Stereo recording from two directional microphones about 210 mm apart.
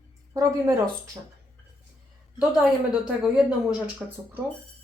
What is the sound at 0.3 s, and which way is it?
Speech, 15° right (ahead or behind).